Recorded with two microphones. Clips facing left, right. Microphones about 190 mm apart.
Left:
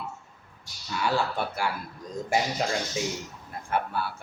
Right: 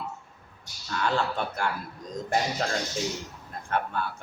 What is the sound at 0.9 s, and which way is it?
Speech, 10° left (ahead or behind).